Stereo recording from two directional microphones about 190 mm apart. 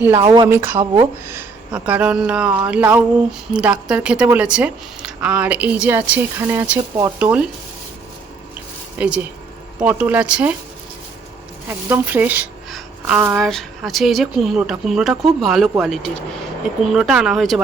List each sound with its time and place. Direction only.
0.2 s speech: 25° right (ahead or behind)
0.4 s speech: 10° right (ahead or behind)
9.0 s speech: 5° right (ahead or behind)
11.9 s speech: 10° right (ahead or behind)